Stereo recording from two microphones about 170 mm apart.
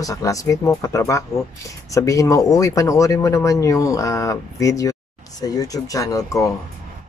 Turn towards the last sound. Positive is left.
turn(degrees=20)  # may be behind; listen again after turning